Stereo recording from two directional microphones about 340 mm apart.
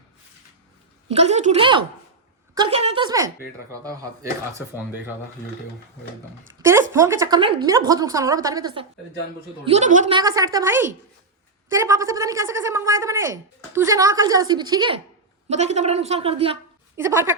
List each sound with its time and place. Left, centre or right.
1.0 s speech: centre
6.6 s a woman's voice: centre